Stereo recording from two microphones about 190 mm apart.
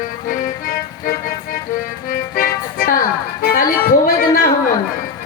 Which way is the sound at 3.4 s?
45° left (ahead or behind).